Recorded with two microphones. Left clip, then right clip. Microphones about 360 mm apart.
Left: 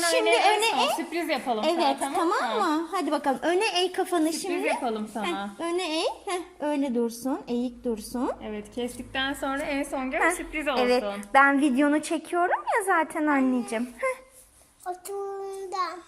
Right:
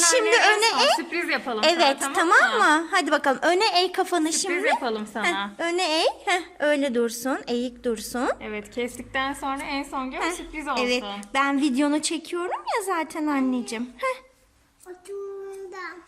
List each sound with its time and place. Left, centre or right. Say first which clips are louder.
0.1 s a woman's voice: right 1 dB; centre
2.3 s a woman's voice: right 8 dB; right
2.9 s a woman's voice: right 5 dB; centre
4.4 s a woman's voice: right 4 dB; right
5.5 s a woman's voice: right 3 dB; centre
9.1 s a woman's voice: right 1 dB; centre
9.7 s a woman's voice: right 1 dB; right
10.1 s a woman's voice: left 4 dB; centre